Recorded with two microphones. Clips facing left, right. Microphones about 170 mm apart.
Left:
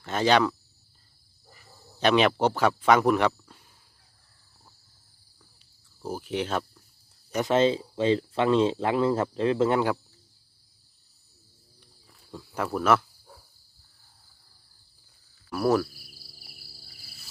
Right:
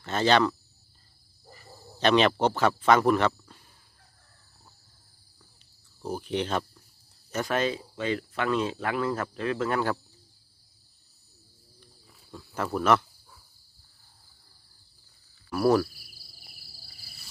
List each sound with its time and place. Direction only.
0.0 s speech: 10° left (ahead or behind)
2.0 s speech: 10° left (ahead or behind)
6.0 s speech: 5° left (ahead or behind)
7.3 s speech: 20° left (ahead or behind)
12.4 s speech: 5° left (ahead or behind)
15.4 s speech: centre (ahead or behind)